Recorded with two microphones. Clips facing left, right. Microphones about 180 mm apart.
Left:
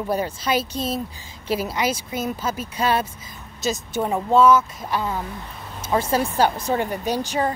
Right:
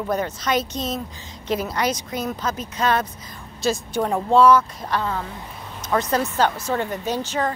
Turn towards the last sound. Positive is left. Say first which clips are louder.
# left 1 dB
turn(degrees=10)  # may be behind; listen again after turning